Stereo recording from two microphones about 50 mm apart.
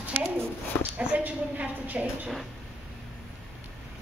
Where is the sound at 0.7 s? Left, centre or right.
Left.